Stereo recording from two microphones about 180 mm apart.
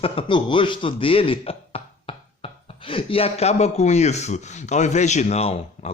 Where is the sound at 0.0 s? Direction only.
30° left (ahead or behind).